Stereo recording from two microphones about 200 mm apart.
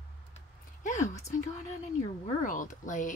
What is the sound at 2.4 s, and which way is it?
Speech, 40° left (ahead or behind).